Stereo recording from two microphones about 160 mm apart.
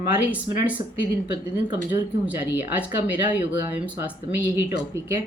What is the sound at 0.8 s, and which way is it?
Speech, 55° left (ahead or behind).